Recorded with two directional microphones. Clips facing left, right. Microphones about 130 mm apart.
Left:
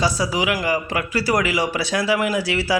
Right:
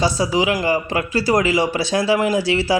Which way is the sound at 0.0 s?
25° right (ahead or behind).